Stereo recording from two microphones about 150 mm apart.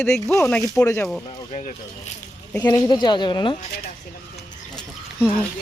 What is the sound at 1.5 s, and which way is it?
Speech, 50° left (ahead or behind).